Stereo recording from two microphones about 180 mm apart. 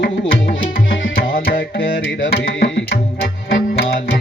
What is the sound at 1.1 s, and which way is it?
Tabla, 55° left (ahead or behind).